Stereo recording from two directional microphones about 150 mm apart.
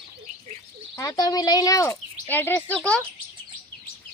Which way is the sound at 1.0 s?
25° left (ahead or behind).